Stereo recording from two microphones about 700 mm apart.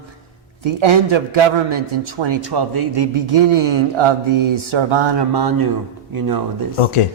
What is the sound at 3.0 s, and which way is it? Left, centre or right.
Mantra, right.